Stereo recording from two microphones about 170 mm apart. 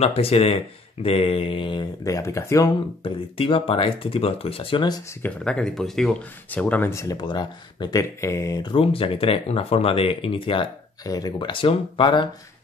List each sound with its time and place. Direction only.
0.0 s speech: 35° left (ahead or behind); by 2.7 s 20° left (ahead or behind)
3.0 s speech: 30° left (ahead or behind)
5.2 s speech: 5° left (ahead or behind); by 12.3 s 30° left (ahead or behind)